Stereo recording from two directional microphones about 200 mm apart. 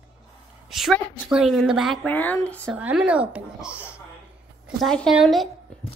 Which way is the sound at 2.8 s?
5° right (ahead or behind).